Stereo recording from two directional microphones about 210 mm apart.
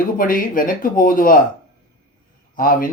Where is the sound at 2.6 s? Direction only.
45° left (ahead or behind).